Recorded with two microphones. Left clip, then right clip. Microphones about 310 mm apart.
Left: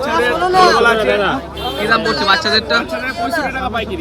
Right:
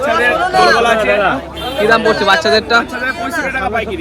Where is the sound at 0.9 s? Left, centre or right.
Right.